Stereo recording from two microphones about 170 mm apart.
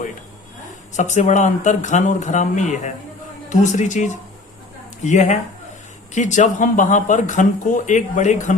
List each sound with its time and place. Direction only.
0.9 s speech: 45° left (ahead or behind)